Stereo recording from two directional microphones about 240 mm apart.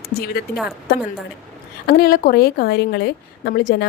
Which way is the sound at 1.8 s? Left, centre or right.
Left.